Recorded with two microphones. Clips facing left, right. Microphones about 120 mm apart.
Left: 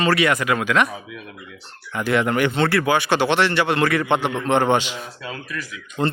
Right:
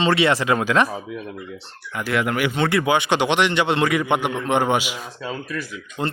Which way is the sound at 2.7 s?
20° right (ahead or behind).